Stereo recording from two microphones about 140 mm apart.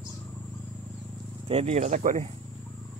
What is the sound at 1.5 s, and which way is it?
Speech, 50° right (ahead or behind).